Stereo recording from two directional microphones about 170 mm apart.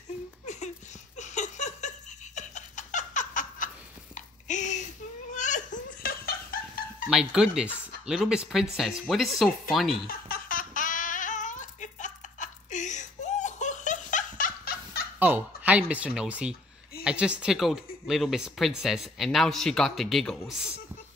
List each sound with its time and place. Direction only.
1.1 s laughter: 45° left (ahead or behind)
7.1 s speech: 5° right (ahead or behind)
10.0 s babbling: 60° left (ahead or behind)
15.1 s speech: 10° right (ahead or behind)